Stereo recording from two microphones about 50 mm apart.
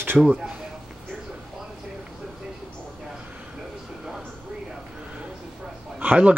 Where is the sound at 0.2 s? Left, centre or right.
Centre.